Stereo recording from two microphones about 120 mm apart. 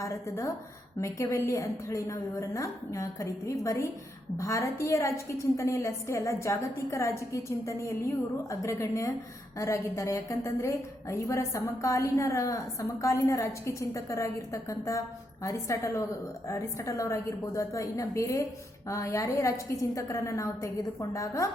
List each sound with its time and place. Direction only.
0.0 s a woman's voice: 25° left (ahead or behind)